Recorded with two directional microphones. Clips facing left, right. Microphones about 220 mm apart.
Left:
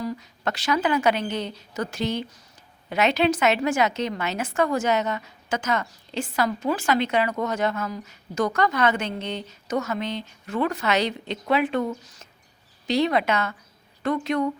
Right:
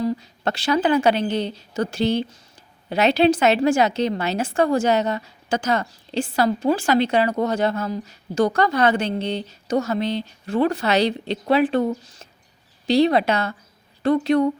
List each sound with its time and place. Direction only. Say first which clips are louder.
0.0 s a woman's voice: right 5 dB; 30° right (ahead or behind)